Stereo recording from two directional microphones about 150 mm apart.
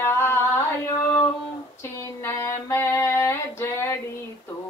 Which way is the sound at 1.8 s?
15° left (ahead or behind).